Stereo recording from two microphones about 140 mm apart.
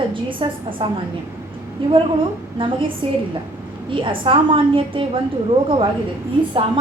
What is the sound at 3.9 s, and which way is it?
A woman's voice, 35° right (ahead or behind).